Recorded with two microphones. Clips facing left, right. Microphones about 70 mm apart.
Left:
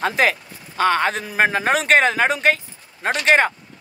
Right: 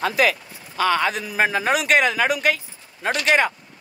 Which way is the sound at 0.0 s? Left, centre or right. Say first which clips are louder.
Left 1 dB; left.